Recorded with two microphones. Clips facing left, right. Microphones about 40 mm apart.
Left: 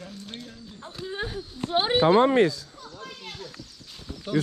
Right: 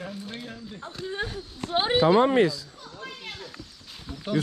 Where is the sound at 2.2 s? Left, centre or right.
Left.